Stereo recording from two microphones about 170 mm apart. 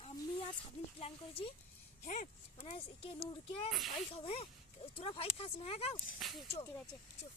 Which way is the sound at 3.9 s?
35° left (ahead or behind).